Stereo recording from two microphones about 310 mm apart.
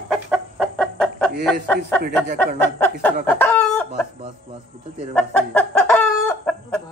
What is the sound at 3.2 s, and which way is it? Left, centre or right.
Chicken, centre.